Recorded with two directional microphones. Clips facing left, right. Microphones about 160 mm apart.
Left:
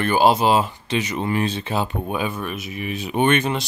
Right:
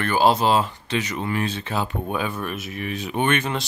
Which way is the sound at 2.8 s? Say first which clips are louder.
Left 4 dB; 10° left (ahead or behind).